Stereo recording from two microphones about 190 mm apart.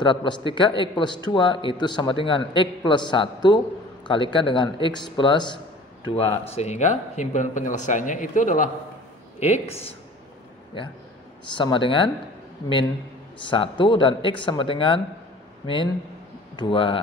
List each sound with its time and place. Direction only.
0.0 s a man's voice: 25° left (ahead or behind)
11.5 s a man's voice: 25° left (ahead or behind)
13.4 s a man's voice: 25° left (ahead or behind)